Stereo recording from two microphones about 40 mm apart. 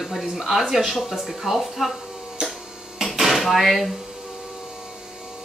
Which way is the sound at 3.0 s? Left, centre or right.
Centre.